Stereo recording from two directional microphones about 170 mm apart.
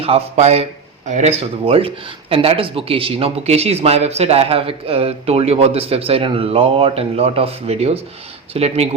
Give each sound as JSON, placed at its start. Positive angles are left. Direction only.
{"t": 0.0, "sound": "speech", "side_deg": -40}